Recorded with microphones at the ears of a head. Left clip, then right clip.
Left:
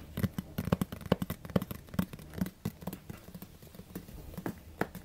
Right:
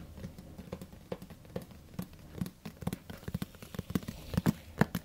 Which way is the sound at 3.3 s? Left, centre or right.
Right.